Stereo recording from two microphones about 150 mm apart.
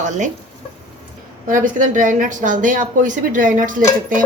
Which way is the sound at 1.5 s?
65° right (ahead or behind).